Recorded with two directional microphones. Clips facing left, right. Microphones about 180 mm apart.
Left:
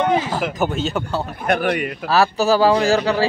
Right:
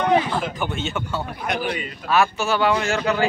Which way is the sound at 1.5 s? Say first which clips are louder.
Left 7 dB; 60° left (ahead or behind).